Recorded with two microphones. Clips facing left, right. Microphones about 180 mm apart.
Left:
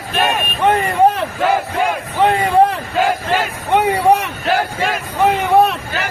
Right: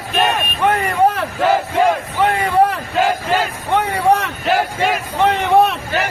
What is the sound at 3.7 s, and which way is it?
Vehicle, 15° left (ahead or behind).